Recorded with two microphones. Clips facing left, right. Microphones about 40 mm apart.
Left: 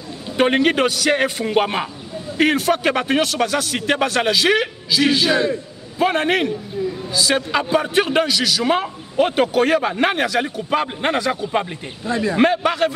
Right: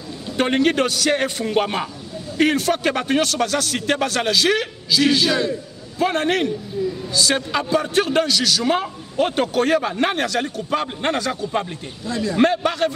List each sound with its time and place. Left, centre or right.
0.4 s a man's voice: centre
12.1 s a man's voice: left
12.4 s a man's voice: centre